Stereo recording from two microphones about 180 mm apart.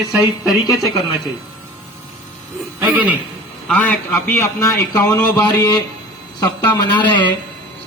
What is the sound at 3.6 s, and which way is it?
A man's voice, 10° left (ahead or behind).